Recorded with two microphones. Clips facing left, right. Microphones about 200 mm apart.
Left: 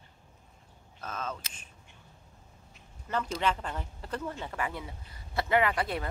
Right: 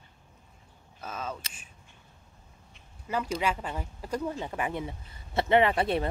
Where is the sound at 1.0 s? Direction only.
10° right (ahead or behind).